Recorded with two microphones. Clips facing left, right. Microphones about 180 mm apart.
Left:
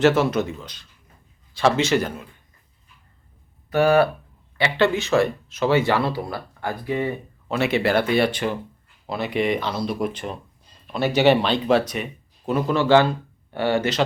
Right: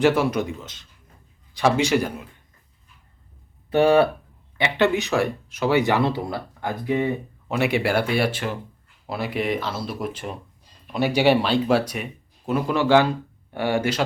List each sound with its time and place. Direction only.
0.0 s speech: 10° right (ahead or behind)
3.7 s speech: 25° right (ahead or behind)